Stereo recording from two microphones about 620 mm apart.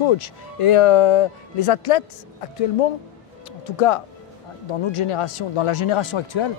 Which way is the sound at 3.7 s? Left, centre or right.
Left.